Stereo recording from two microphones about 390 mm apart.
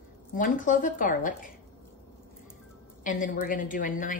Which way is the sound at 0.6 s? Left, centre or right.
Centre.